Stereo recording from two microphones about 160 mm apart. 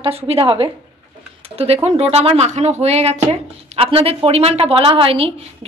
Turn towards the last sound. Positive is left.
turn(degrees=-35)  # may be behind; listen again after turning